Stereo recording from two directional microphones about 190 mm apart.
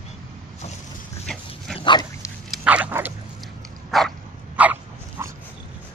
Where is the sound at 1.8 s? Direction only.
25° left (ahead or behind).